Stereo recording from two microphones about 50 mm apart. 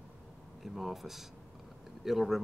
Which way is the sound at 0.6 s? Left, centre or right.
Centre.